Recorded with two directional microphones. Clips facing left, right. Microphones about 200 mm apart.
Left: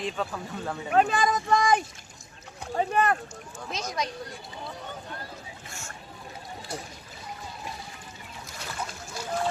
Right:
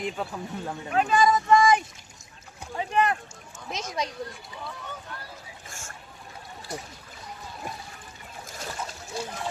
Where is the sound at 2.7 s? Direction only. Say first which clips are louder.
Left 1 dB; 50° left (ahead or behind).